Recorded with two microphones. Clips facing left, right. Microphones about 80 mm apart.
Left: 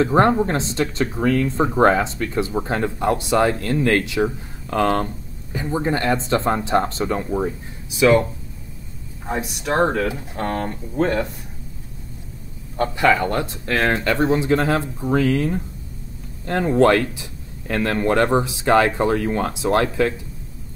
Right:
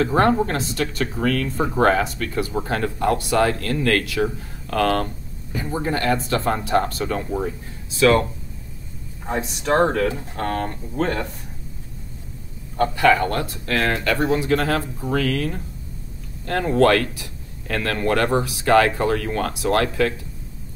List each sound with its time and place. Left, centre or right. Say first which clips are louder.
0.0 s speech: left 2 dB; left
9.4 s speech: right 1 dB; centre
10.3 s speech: even; left
12.7 s speech: right 1 dB; left